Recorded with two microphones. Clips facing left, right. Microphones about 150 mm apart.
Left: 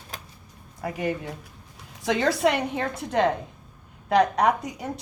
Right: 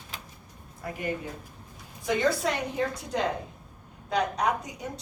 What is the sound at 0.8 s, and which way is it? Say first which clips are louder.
A woman's voice: left 4 dB; 80° left.